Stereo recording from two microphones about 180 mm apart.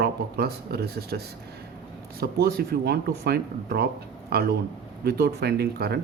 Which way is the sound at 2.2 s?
60° right (ahead or behind).